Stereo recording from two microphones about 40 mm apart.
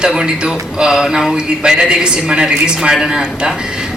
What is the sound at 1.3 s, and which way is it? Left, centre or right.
A woman's voice, right.